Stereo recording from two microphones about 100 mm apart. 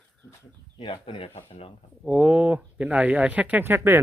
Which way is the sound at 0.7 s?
65° left (ahead or behind).